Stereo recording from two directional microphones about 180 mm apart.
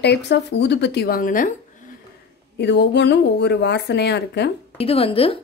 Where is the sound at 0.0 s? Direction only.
70° left (ahead or behind); by 1.5 s 50° left (ahead or behind).